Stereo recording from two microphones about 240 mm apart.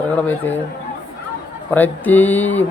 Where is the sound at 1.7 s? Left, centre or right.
Centre.